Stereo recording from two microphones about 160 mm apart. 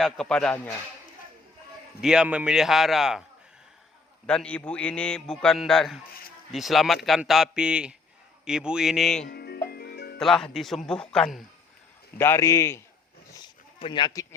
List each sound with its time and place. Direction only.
0.0 s a man's voice: 5° left (ahead or behind)
2.0 s a man's voice: 5° right (ahead or behind)
4.3 s a man's voice: 5° left (ahead or behind)
9.3 s music: 75° left (ahead or behind)
10.2 s a man's voice: 5° left (ahead or behind)
12.1 s a man's voice: 15° left (ahead or behind)
13.3 s a sound: 30° left (ahead or behind)